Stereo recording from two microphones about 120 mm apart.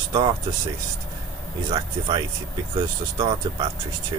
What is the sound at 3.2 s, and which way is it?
Speech, 35° right (ahead or behind).